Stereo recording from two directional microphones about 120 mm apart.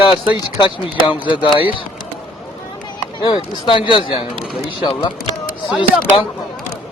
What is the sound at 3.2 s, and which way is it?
Speech, 45° left (ahead or behind).